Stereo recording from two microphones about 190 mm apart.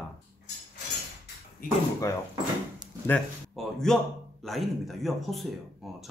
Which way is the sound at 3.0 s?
5° left (ahead or behind).